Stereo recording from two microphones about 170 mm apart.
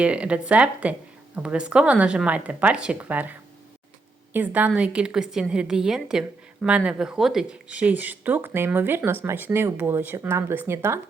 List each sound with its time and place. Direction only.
0.0 s a woman's voice: 5° right (ahead or behind)